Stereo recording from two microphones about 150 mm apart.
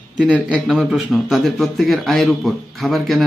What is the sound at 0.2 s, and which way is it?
A man's voice, 5° right (ahead or behind).